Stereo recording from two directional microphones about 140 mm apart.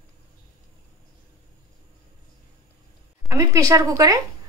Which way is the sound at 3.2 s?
20° right (ahead or behind).